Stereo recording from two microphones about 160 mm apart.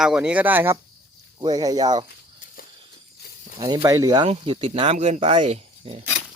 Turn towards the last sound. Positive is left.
turn(degrees=-40)  # may be behind; listen again after turning